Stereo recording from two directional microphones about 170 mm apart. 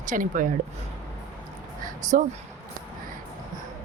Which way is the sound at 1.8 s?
45° right (ahead or behind).